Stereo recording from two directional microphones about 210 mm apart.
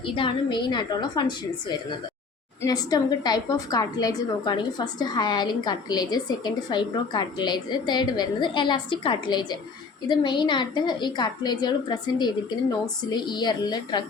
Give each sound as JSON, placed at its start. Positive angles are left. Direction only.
{"t": 0.0, "sound": "a woman's voice", "side_deg": 25}